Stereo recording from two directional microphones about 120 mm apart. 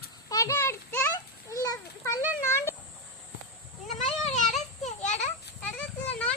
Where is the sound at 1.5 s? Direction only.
30° left (ahead or behind).